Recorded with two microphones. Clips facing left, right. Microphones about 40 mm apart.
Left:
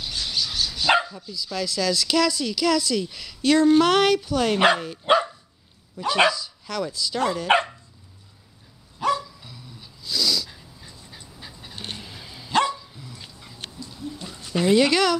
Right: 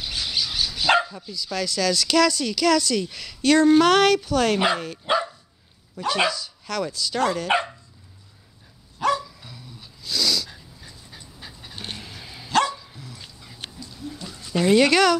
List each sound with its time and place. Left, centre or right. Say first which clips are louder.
0.0 s dog: right 1 dB; centre
0.8 s dog: right 1 dB; centre
1.3 s speech: right 1 dB; centre
5.1 s dog: left 4 dB; left
6.0 s speech: left 3 dB; centre
9.0 s dog: right 1 dB; centre
12.4 s dog: even; centre
12.7 s dog: even; centre
13.0 s dog: even; centre
14.5 s speech: right 1 dB; centre